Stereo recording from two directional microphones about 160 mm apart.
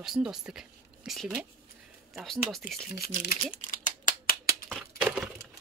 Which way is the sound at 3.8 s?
60° left (ahead or behind).